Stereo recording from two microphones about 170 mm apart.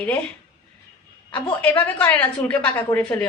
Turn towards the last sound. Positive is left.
turn(degrees=10)  # may be behind; listen again after turning